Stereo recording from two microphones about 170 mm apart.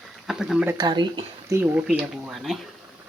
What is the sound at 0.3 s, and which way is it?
Speech, 5° right (ahead or behind).